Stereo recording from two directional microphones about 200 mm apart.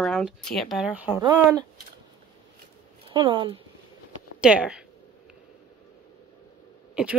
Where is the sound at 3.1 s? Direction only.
25° right (ahead or behind).